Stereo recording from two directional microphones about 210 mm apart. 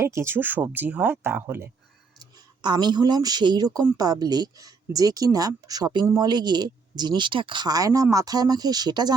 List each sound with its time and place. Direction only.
0.0 s speech: 15° right (ahead or behind)